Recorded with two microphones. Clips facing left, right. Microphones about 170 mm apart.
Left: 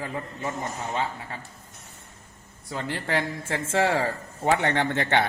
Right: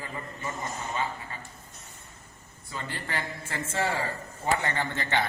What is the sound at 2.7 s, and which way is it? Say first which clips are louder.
Speech: left 7 dB; 85° left.